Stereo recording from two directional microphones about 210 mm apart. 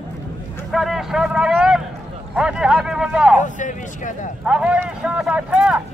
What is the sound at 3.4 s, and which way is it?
Speech, 35° left (ahead or behind).